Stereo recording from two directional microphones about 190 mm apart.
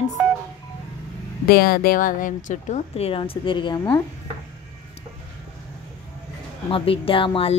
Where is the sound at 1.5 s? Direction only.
55° left (ahead or behind).